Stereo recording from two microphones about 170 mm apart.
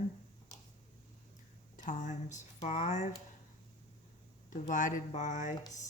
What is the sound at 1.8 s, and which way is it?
Speech, 45° left (ahead or behind).